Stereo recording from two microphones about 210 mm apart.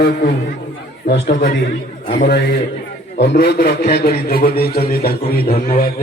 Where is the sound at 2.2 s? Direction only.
50° left (ahead or behind).